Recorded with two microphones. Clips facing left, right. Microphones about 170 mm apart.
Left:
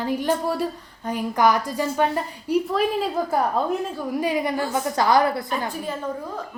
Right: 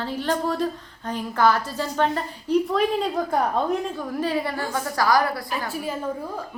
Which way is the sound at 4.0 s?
15° left (ahead or behind).